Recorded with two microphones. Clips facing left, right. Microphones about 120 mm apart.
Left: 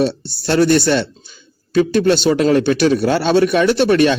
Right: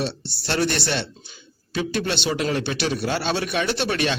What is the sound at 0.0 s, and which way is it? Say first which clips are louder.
A man's voice: left 10 dB; 45° left (ahead or behind).